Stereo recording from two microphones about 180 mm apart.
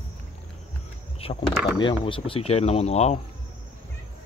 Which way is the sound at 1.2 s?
30° left (ahead or behind).